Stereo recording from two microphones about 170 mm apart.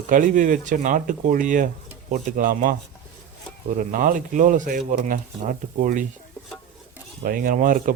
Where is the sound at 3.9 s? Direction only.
50° right (ahead or behind).